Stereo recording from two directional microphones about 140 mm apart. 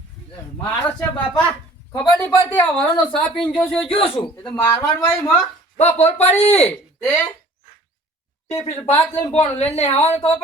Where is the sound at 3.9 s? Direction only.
40° left (ahead or behind).